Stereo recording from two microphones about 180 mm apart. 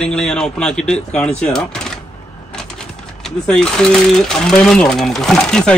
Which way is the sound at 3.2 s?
5° left (ahead or behind).